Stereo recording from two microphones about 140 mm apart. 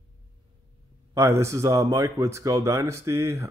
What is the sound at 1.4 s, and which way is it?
Speech, 20° right (ahead or behind).